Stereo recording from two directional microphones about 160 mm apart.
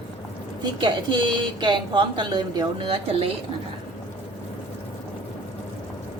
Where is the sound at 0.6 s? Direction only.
30° right (ahead or behind).